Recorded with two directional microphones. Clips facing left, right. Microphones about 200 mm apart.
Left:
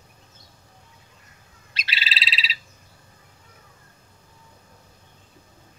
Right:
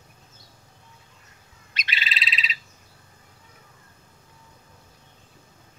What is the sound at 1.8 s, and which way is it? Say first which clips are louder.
Frog: even; 30° left (ahead or behind).